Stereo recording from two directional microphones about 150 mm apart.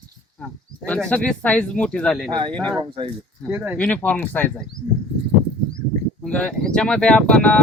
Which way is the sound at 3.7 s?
10° left (ahead or behind).